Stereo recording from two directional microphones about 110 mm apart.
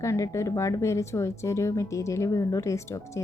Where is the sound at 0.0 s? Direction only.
25° left (ahead or behind).